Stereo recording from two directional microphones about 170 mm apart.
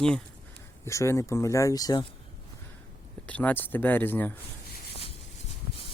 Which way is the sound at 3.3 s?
10° left (ahead or behind).